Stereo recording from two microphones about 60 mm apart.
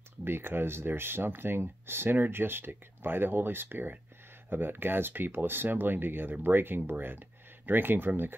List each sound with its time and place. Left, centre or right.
0.2 s speech: right